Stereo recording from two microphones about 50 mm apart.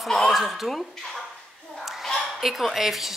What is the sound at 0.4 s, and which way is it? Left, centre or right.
Speech, centre.